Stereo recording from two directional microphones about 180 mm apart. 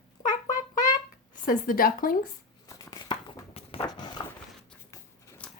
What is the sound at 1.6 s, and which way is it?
Speech, 50° left (ahead or behind).